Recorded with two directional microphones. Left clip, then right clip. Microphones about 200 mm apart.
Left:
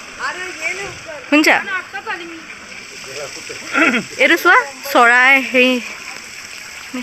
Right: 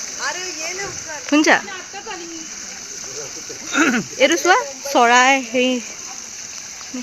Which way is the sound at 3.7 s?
75° right (ahead or behind).